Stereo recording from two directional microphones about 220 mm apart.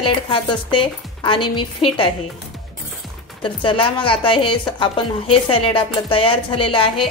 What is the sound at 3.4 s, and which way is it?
A woman's voice, 25° left (ahead or behind).